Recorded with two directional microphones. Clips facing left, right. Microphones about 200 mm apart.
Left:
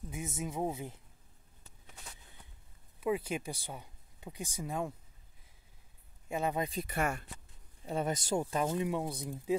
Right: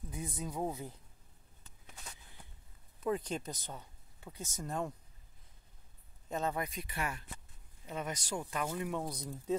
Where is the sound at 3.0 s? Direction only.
10° left (ahead or behind).